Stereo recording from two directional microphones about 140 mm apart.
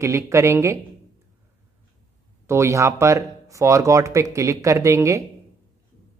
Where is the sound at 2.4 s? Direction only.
20° right (ahead or behind).